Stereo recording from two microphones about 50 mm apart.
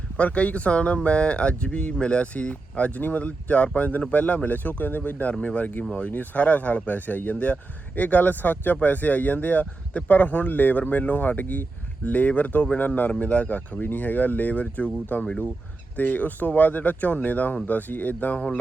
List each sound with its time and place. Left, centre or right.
0.2 s speech: left
5.3 s speech: left
18.3 s speech: centre